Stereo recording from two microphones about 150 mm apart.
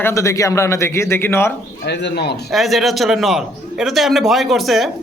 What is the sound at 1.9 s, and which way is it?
Speech, 90° left.